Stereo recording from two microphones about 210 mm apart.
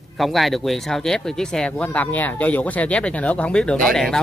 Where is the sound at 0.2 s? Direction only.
Centre (ahead or behind).